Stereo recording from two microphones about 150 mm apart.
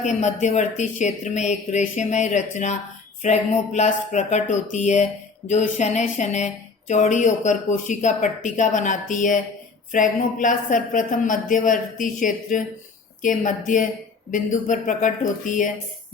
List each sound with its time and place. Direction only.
0.0 s speech: 55° left (ahead or behind)